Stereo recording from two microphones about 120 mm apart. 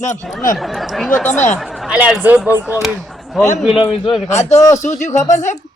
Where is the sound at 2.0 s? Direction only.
15° right (ahead or behind).